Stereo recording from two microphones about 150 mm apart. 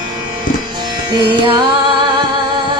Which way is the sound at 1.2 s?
30° right (ahead or behind).